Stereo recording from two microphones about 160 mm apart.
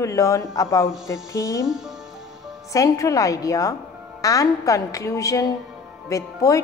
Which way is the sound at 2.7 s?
20° left (ahead or behind).